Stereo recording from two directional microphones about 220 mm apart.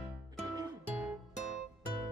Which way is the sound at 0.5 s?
5° right (ahead or behind).